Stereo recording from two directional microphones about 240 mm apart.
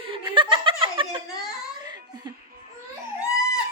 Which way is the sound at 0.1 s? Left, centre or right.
Right.